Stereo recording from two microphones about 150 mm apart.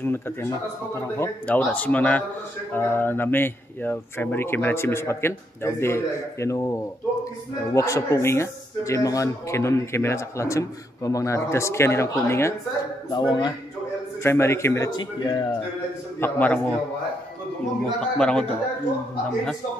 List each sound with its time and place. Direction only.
0.0 s speech: 15° left (ahead or behind)
14.2 s speech: 15° left (ahead or behind)
15.0 s speech: 30° left (ahead or behind)
16.2 s speech: 10° left (ahead or behind)
18.0 s a man's voice: 5° left (ahead or behind)